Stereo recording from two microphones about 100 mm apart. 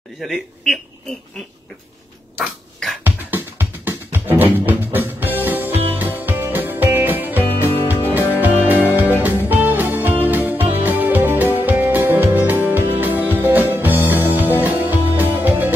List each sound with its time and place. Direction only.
0.2 s speech: centre (ahead or behind)
3.0 s music: 20° right (ahead or behind)
7.6 s music: 25° left (ahead or behind)
8.6 s music: 20° right (ahead or behind)